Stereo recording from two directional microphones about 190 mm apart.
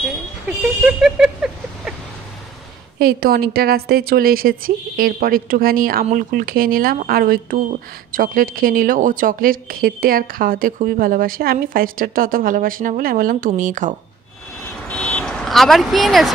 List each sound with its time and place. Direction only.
0.0 s a sound: centre (ahead or behind)
3.0 s speech: 50° right (ahead or behind)
14.7 s vehicle: 5° left (ahead or behind)